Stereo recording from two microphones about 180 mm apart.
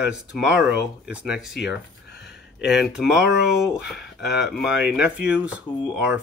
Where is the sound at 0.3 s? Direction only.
5° right (ahead or behind).